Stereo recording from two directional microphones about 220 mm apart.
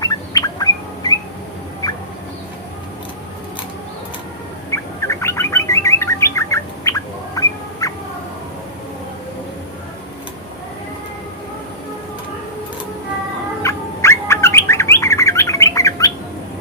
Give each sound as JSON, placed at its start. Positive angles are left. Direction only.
{"t": 0.0, "sound": "bird", "side_deg": 15}
{"t": 4.7, "sound": "bird", "side_deg": 15}
{"t": 13.6, "sound": "bird", "side_deg": 15}